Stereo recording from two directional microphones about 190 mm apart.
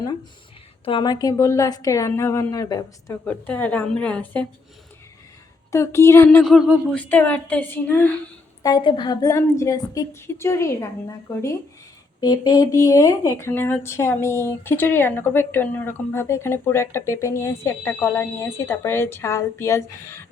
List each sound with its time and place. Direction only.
0.9 s speech: 25° left (ahead or behind)
5.7 s speech: 15° left (ahead or behind)
8.6 s speech: 25° left (ahead or behind)